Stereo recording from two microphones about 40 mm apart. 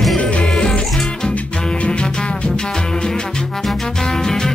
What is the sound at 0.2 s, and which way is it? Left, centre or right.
Music, left.